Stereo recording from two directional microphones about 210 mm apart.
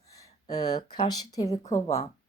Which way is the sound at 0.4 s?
20° left (ahead or behind).